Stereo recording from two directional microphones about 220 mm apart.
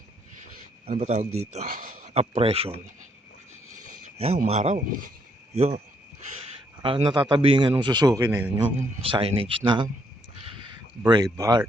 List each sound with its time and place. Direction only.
0.9 s speech: 30° right (ahead or behind)
3.8 s a sound: 90° right
4.0 s speech: 30° right (ahead or behind)
6.8 s a man's voice: 20° right (ahead or behind)
9.0 s speech: 25° right (ahead or behind)
11.0 s a man's voice: 15° right (ahead or behind)